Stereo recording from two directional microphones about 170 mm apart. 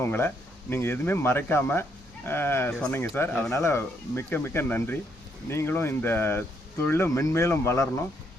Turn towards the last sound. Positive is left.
turn(degrees=15)  # may be behind; listen again after turning